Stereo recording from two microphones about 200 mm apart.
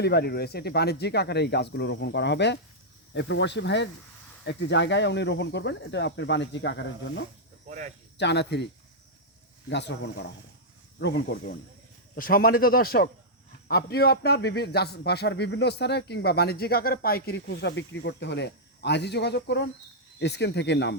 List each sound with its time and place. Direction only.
0.0 s a man's voice: 55° left (ahead or behind)
7.7 s speech: 40° right (ahead or behind)
8.2 s a man's voice: 60° left (ahead or behind)
9.6 s a man's voice: 60° left (ahead or behind)
12.1 s a man's voice: 45° left (ahead or behind)